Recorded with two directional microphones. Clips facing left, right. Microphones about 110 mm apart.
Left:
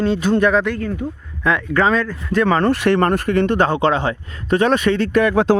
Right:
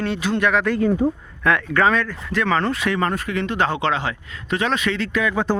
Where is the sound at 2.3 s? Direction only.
40° left (ahead or behind).